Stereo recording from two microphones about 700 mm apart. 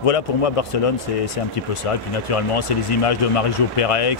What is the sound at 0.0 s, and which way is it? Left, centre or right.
Speech, left.